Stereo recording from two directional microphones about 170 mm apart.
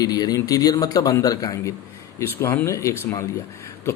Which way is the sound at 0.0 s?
20° left (ahead or behind).